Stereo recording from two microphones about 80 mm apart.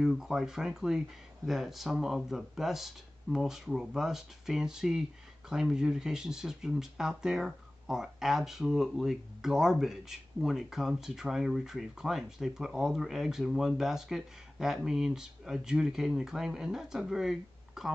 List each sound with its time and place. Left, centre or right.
0.0 s speech: centre